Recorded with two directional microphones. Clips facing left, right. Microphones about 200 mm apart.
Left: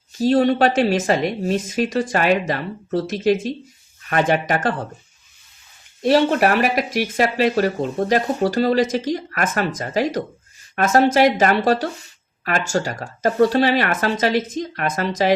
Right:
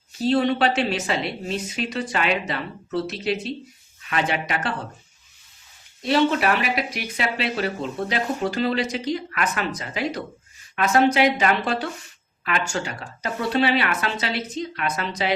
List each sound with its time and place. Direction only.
0.2 s speech: 40° left (ahead or behind)
6.0 s speech: 50° left (ahead or behind)